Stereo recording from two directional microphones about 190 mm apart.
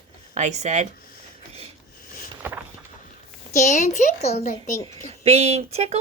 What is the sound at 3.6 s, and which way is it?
Speech, 40° left (ahead or behind).